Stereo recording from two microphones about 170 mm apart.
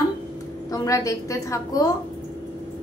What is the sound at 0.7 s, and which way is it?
A woman's voice, 20° left (ahead or behind).